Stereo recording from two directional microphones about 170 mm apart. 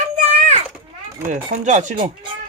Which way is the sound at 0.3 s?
40° right (ahead or behind).